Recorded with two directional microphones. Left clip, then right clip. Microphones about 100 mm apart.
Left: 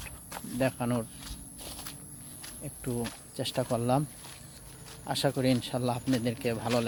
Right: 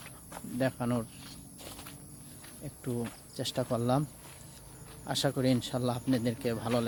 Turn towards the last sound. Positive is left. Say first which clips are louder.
# left 2 dB
turn(degrees=0)  # may be behind; listen again after turning